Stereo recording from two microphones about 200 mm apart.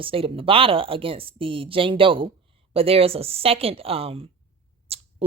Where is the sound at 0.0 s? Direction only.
25° right (ahead or behind).